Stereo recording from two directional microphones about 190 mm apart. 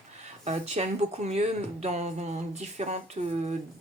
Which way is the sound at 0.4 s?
35° right (ahead or behind).